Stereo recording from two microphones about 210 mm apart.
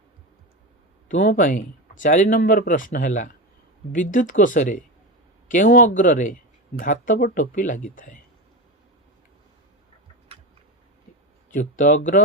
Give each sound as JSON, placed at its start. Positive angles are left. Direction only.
{"t": 1.0, "sound": "speech", "side_deg": 40}
{"t": 11.5, "sound": "speech", "side_deg": 40}